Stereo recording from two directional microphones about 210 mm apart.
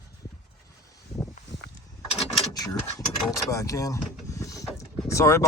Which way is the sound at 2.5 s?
15° left (ahead or behind).